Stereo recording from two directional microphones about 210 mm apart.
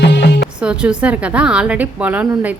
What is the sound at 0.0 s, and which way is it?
Music, 55° left (ahead or behind).